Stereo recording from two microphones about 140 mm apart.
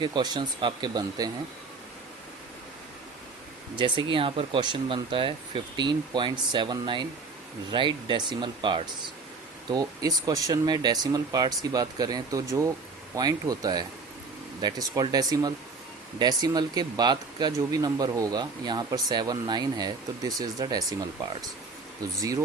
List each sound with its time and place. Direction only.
0.0 s speech: 30° right (ahead or behind)
3.8 s speech: 35° right (ahead or behind)